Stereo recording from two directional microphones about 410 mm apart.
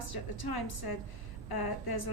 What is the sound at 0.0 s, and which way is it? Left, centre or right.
A woman's voice, left.